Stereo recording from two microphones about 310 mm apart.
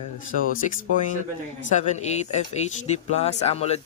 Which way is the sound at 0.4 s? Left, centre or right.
Left.